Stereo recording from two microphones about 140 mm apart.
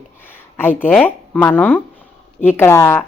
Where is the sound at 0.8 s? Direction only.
15° left (ahead or behind).